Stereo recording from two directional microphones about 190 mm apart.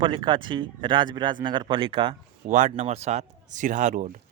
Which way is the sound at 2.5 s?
40° right (ahead or behind).